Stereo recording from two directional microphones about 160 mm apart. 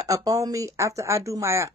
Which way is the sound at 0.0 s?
20° right (ahead or behind).